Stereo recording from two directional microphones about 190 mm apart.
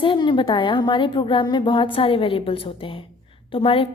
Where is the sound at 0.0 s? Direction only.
25° left (ahead or behind).